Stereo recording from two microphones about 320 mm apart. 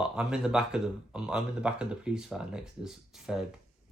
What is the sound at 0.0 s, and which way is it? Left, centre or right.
Speech, centre.